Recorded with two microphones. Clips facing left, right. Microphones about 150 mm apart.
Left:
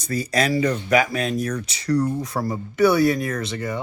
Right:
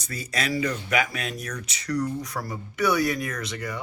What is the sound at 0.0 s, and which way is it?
Speech, 35° left (ahead or behind).